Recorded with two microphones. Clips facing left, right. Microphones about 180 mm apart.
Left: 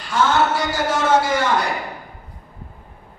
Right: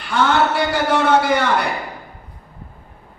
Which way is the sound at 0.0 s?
60° right (ahead or behind).